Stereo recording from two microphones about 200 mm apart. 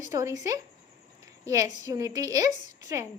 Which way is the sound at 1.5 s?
15° right (ahead or behind).